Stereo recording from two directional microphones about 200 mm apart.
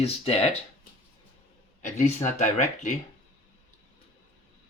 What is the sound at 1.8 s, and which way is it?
Speech, 35° left (ahead or behind).